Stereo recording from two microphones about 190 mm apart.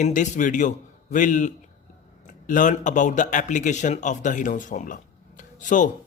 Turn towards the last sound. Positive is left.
turn(degrees=40)  # may be behind; listen again after turning